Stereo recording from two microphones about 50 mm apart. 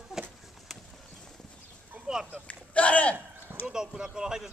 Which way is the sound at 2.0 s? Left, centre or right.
Right.